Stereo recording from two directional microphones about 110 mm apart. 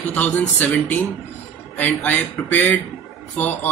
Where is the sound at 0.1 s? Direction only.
20° left (ahead or behind).